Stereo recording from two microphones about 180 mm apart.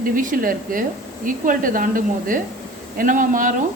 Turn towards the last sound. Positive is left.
turn(degrees=-45)  # may be behind; listen again after turning